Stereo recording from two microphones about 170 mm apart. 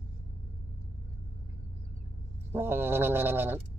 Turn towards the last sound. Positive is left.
turn(degrees=-15)  # may be behind; listen again after turning